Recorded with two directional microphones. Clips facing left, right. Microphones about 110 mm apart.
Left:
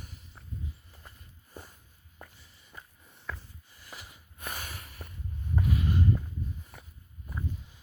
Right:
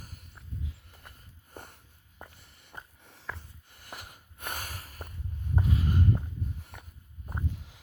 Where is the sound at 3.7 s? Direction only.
55° right (ahead or behind).